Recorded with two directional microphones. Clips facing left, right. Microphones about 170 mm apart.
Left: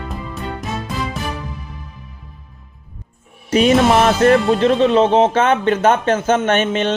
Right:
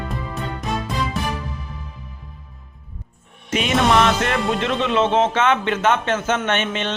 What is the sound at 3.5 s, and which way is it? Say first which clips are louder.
Speech: left 6 dB; 40° left (ahead or behind).